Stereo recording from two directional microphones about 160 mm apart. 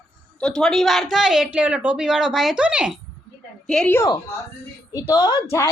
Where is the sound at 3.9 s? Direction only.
15° left (ahead or behind).